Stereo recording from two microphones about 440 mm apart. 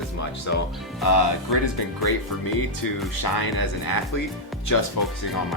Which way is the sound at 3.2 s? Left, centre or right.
Left.